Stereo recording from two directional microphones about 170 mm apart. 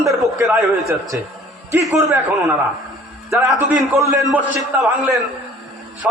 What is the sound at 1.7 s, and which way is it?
Speech, 15° right (ahead or behind).